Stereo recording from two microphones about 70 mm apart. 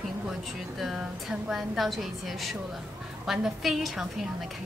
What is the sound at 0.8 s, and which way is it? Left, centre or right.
Speech, centre.